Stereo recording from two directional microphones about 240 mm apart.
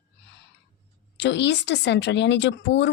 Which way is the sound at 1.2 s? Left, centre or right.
Left.